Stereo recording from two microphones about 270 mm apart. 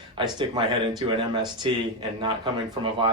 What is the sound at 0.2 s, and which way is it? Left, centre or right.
Speech, centre.